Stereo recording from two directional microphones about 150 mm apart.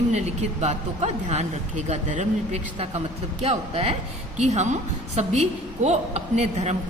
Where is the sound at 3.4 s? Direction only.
45° right (ahead or behind).